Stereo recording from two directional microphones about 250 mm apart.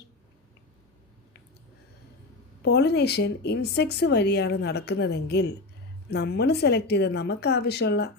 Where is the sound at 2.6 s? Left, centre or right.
Left.